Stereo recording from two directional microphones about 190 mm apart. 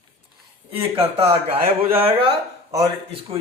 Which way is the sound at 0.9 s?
30° right (ahead or behind).